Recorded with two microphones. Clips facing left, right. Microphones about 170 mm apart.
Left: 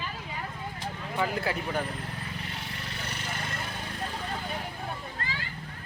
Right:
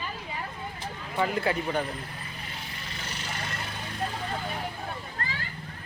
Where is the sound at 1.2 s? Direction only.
Centre (ahead or behind).